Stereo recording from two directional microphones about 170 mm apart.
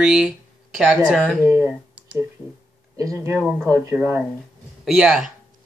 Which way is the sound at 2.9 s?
15° right (ahead or behind).